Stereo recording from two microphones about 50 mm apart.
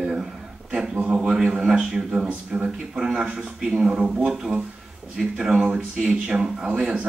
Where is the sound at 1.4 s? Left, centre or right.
Centre.